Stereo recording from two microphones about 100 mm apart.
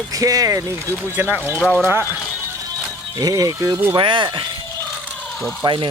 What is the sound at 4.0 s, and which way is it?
Speech, 55° right (ahead or behind).